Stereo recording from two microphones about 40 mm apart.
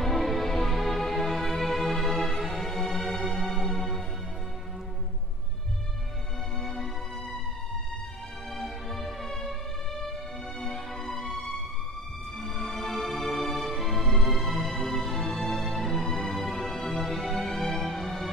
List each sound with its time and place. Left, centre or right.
0.0 s music: centre
6.6 s music: centre
8.5 s music: centre
10.6 s music: centre
12.4 s music: centre